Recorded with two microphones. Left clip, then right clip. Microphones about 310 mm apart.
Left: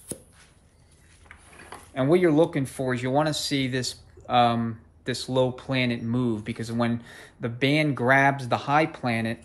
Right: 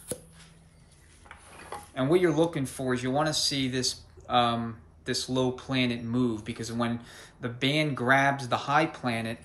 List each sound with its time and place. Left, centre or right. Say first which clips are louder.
2.0 s speech: left 4 dB; centre